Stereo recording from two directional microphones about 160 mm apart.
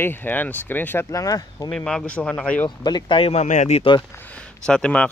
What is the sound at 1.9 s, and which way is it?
Speech, 5° left (ahead or behind).